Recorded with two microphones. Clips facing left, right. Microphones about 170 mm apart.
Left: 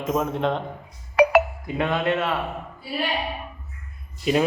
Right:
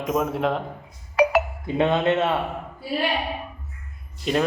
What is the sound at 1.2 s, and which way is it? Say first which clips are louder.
Music: left 2 dB; 65° left (ahead or behind).